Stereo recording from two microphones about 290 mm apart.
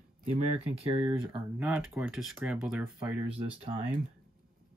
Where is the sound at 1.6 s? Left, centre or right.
Centre.